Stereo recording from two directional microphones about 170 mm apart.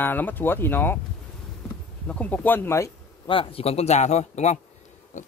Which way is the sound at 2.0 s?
5° left (ahead or behind).